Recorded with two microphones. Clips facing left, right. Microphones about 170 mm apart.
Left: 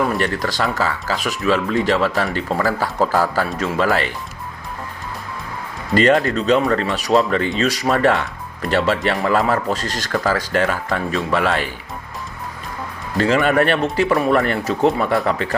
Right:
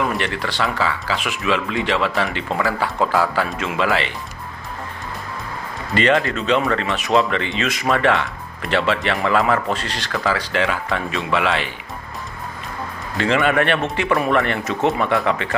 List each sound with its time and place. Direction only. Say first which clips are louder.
0.2 s speech: left 2 dB; 40° left (ahead or behind)
5.9 s speech: left 3 dB; 40° left (ahead or behind)
13.1 s speech: left 2 dB; 40° left (ahead or behind)